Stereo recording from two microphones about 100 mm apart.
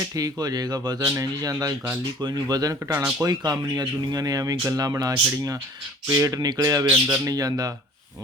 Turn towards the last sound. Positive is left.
turn(degrees=-40)  # may be behind; listen again after turning